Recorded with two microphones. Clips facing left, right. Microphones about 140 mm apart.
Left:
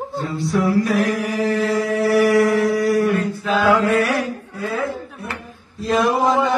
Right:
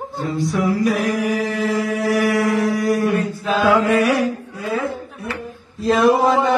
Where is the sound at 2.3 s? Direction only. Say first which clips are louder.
Left 2 dB; 15° right (ahead or behind).